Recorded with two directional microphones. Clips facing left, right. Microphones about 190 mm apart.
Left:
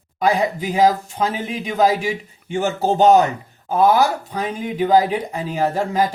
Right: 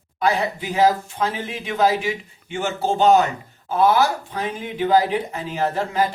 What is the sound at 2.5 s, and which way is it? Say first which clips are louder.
Speech: left 4 dB; 40° left (ahead or behind).